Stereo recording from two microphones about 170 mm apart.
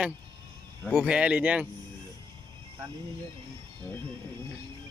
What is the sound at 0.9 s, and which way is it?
Speech, centre (ahead or behind).